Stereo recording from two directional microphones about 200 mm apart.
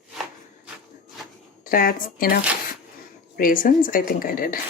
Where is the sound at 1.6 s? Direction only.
45° left (ahead or behind).